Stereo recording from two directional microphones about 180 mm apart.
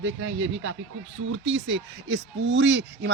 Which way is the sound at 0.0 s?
90° right.